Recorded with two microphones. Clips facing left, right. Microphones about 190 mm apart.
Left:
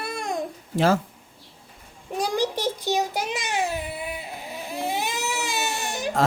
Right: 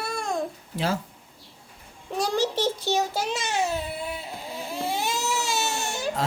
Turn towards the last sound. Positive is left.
turn(degrees=15)  # may be behind; listen again after turning